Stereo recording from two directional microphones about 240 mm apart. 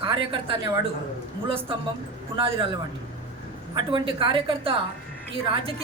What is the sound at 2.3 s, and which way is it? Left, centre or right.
Speech, right.